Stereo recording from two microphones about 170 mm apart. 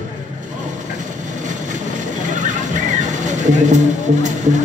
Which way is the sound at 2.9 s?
45° right (ahead or behind).